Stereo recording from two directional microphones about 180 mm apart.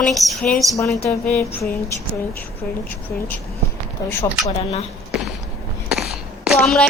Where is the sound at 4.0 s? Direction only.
20° left (ahead or behind).